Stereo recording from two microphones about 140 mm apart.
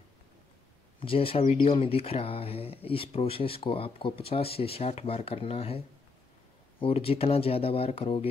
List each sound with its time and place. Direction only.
0.9 s speech: 40° left (ahead or behind)
6.8 s speech: 45° left (ahead or behind)